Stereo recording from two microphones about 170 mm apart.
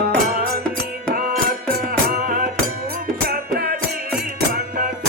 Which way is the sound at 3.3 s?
65° right (ahead or behind).